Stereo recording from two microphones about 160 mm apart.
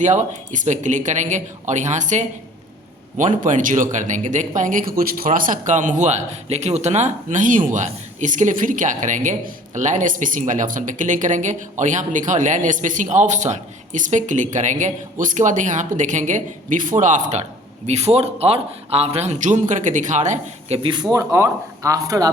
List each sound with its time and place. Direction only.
0.0 s a man's voice: 50° right (ahead or behind); by 22.3 s 20° right (ahead or behind)